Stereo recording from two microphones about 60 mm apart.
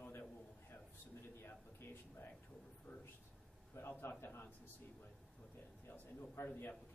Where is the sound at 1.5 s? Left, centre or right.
Left.